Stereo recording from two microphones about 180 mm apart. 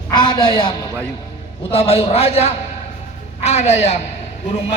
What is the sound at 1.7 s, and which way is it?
A man's voice, 35° left (ahead or behind).